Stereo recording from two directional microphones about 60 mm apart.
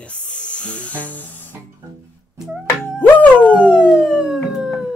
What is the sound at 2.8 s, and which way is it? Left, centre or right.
Music, left.